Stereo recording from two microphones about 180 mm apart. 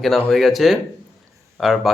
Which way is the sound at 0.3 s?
Centre (ahead or behind).